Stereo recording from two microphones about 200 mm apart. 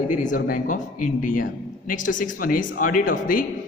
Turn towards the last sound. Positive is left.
turn(degrees=45)  # may be behind; listen again after turning